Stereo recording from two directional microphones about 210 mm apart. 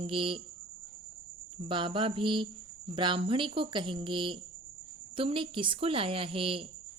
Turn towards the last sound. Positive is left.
turn(degrees=-25)  # may be behind; listen again after turning